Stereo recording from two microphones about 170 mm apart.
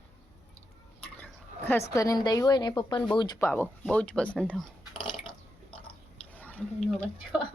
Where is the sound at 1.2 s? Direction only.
10° left (ahead or behind).